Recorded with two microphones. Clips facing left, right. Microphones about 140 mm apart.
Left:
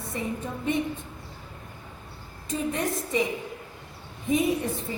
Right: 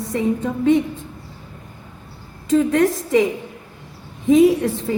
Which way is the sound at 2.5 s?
90° right.